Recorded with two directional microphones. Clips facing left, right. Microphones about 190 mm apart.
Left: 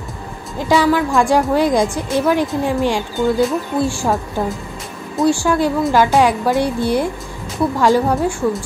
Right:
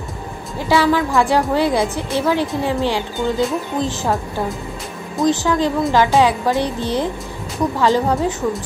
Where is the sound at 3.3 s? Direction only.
10° left (ahead or behind).